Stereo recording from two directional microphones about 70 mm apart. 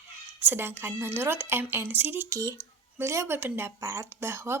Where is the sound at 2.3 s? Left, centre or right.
Right.